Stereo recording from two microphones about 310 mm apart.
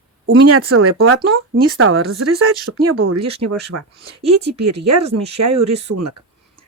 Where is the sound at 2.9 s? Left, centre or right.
Right.